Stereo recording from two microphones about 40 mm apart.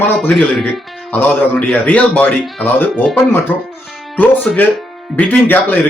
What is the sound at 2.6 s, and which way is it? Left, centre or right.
Speech, left.